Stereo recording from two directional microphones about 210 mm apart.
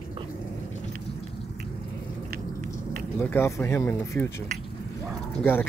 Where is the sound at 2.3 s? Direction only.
45° right (ahead or behind).